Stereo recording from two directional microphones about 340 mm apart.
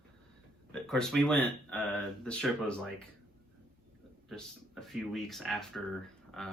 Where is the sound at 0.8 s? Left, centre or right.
Centre.